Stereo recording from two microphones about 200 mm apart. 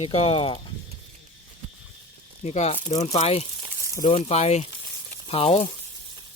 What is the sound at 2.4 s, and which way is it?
Speech, 35° left (ahead or behind).